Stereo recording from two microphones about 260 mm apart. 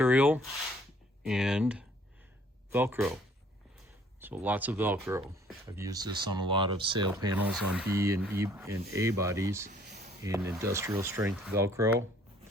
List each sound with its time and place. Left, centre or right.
0.0 s speech: centre
4.2 s speech: centre
7.4 s speech: centre
9.6 s a sound: right
10.2 s speech: centre